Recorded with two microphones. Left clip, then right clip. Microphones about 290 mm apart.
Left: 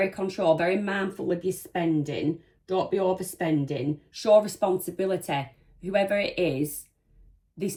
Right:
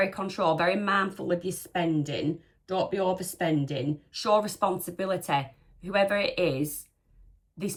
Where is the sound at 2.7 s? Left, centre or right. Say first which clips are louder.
Left 2 dB; left.